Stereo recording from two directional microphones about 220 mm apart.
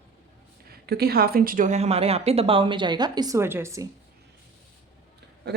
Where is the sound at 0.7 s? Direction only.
45° right (ahead or behind); by 3.8 s 15° right (ahead or behind).